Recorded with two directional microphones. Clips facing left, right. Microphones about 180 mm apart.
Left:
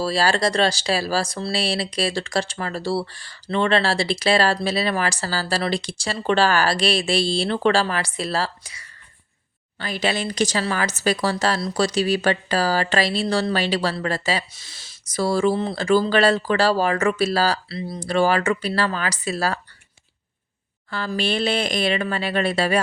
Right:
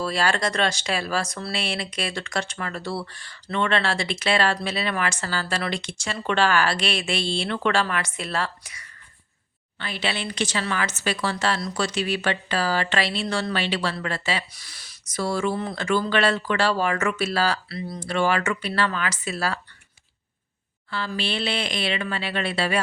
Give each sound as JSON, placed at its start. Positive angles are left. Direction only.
{"t": 0.0, "sound": "speech", "side_deg": 35}
{"t": 9.7, "sound": "speech", "side_deg": 40}
{"t": 14.5, "sound": "speech", "side_deg": 25}
{"t": 20.9, "sound": "speech", "side_deg": 45}